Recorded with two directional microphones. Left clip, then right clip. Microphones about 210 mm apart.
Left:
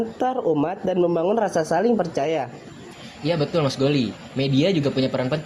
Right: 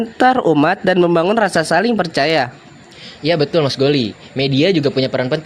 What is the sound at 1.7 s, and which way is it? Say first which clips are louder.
A man's voice: right 5 dB; 50° right (ahead or behind).